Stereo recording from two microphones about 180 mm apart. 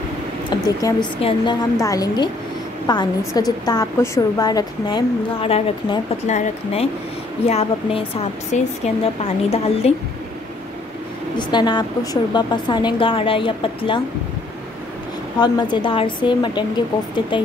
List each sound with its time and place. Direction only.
0.5 s a woman's voice: 20° left (ahead or behind)
11.3 s a woman's voice: 25° left (ahead or behind)
15.3 s a woman's voice: 25° left (ahead or behind)